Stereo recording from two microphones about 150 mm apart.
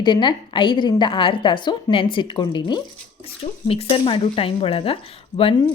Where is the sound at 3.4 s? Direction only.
40° left (ahead or behind).